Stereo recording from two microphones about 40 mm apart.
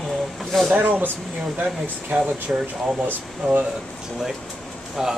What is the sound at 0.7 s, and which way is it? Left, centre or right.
Speech, right.